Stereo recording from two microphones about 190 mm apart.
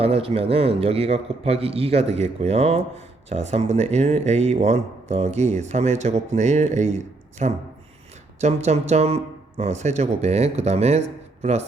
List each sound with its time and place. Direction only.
0.0 s speech: 30° right (ahead or behind)